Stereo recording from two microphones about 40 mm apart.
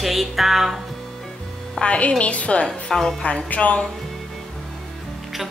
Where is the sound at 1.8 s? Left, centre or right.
Left.